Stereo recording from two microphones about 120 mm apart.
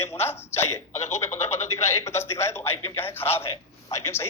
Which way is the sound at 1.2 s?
65° left (ahead or behind).